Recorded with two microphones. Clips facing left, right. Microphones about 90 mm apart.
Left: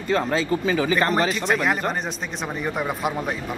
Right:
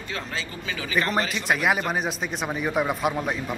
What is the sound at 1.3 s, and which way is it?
A man's voice, 5° right (ahead or behind).